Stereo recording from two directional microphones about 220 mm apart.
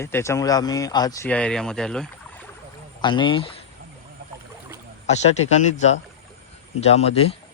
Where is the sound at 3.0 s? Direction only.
20° left (ahead or behind).